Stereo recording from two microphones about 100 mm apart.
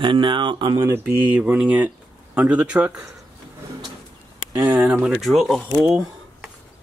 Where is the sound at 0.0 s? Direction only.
55° right (ahead or behind).